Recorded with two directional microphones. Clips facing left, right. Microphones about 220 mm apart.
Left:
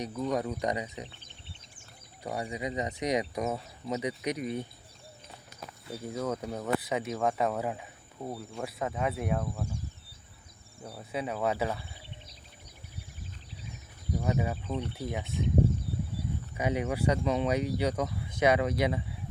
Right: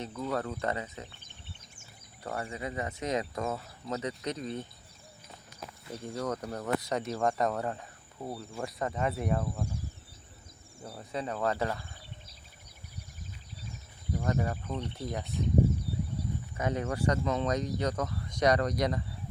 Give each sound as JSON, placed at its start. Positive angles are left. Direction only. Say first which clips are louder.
{"t": 0.0, "sound": "speech", "louder": "left 3 dB", "side_deg": 15}
{"t": 2.2, "sound": "speech", "louder": "left 2 dB", "side_deg": 15}
{"t": 5.9, "sound": "speech", "louder": "left 1 dB", "side_deg": 5}
{"t": 10.8, "sound": "speech", "louder": "left 1 dB", "side_deg": 0}
{"t": 14.2, "sound": "speech", "louder": "left 1 dB", "side_deg": 10}
{"t": 16.6, "sound": "speech", "louder": "left 2 dB", "side_deg": 10}